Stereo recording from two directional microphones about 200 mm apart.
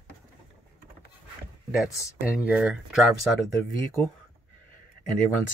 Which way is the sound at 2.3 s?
5° right (ahead or behind).